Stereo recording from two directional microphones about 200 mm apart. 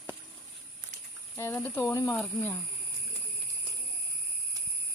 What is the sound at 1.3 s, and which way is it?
Speech, 10° left (ahead or behind).